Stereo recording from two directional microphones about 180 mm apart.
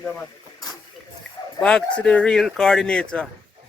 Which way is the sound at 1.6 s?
5° left (ahead or behind).